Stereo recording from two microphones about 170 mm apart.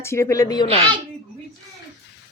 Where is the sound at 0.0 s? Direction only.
15° left (ahead or behind).